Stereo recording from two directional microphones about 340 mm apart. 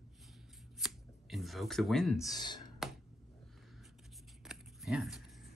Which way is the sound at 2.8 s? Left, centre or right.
Centre.